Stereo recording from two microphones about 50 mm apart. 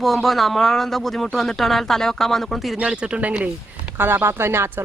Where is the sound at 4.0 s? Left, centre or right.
Right.